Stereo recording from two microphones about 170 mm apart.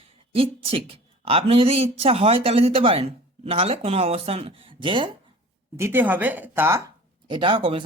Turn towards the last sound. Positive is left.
turn(degrees=-30)  # may be behind; listen again after turning